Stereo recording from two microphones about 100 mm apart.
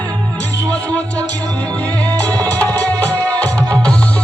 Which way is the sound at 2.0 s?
15° left (ahead or behind).